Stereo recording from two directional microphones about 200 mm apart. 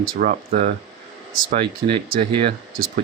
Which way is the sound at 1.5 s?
30° right (ahead or behind).